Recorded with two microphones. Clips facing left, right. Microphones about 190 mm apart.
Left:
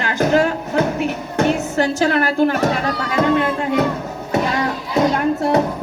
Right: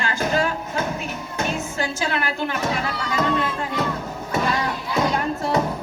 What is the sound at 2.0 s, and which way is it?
Speech, 45° left (ahead or behind).